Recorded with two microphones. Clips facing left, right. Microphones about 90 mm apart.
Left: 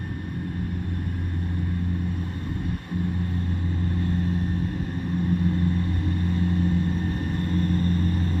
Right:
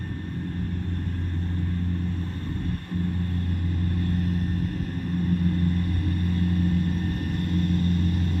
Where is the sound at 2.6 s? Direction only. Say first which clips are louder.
Even; 15° left (ahead or behind).